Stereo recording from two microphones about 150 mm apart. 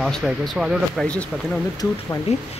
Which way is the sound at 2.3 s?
45° left (ahead or behind).